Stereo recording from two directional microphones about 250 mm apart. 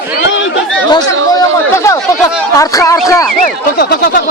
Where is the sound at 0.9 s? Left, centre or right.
Centre.